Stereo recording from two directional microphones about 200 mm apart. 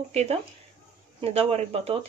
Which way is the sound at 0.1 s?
30° right (ahead or behind).